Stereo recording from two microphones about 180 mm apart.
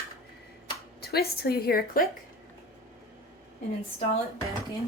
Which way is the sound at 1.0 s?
60° left (ahead or behind).